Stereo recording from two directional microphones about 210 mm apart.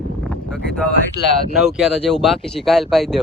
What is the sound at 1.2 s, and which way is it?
Speech, 50° left (ahead or behind).